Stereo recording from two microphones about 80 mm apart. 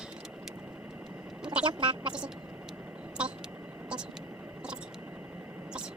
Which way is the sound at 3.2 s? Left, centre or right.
Centre.